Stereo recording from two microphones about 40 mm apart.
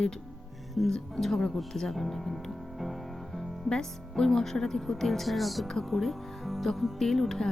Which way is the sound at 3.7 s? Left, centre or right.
Centre.